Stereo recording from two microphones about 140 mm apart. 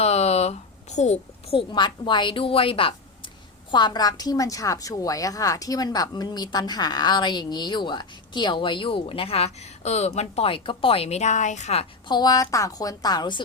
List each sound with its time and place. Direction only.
0.0 s a child's voice: 50° left (ahead or behind)
12.0 s a woman's voice: 30° left (ahead or behind)